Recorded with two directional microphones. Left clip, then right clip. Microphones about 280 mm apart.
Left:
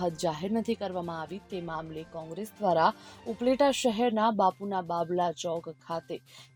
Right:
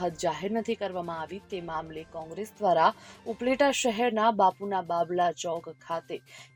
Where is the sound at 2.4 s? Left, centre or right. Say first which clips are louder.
Right 2 dB; left.